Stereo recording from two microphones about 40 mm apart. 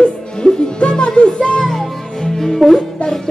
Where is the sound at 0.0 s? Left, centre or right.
Left; by 2.8 s centre.